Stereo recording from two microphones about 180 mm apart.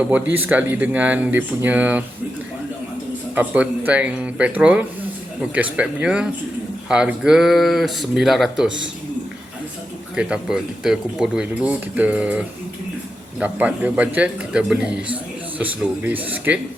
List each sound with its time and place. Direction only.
0.0 s a man's voice: 10° right (ahead or behind)
3.3 s a man's voice: 10° right (ahead or behind)
8.6 s a man's voice: 90° right
10.2 s a man's voice: 5° right (ahead or behind)